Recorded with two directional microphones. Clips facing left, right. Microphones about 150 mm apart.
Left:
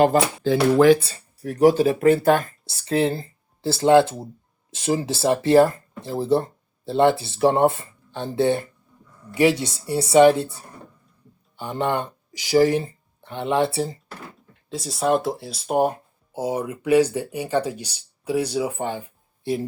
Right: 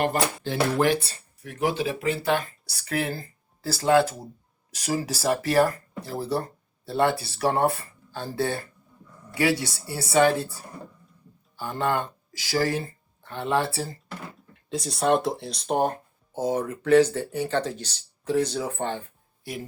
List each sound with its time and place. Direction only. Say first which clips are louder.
1.4 s speech: left 10 dB; 40° left (ahead or behind)
2.6 s speech: left 11 dB; 25° left (ahead or behind)
14.5 s speech: right 1 dB; centre (ahead or behind)
19.4 s speech: left 10 dB; 25° left (ahead or behind)